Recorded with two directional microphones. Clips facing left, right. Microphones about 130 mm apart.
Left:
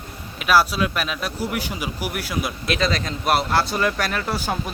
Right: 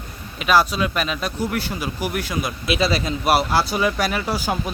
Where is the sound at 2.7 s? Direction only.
5° right (ahead or behind).